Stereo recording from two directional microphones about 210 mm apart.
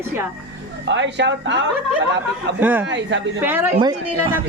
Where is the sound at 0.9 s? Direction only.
60° right (ahead or behind).